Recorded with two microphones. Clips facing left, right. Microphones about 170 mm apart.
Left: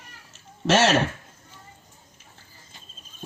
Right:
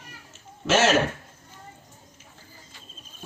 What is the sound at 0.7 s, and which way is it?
Speech, 35° left (ahead or behind).